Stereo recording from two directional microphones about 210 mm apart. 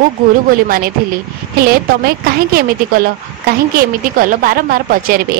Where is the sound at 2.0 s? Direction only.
45° right (ahead or behind).